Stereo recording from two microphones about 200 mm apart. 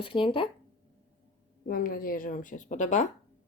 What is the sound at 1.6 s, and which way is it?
A woman's voice, 45° left (ahead or behind).